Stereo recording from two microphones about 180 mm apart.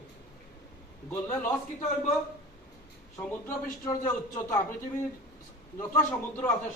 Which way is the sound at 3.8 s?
15° left (ahead or behind).